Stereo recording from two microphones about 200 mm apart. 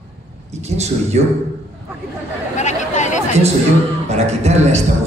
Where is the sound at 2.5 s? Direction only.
35° left (ahead or behind).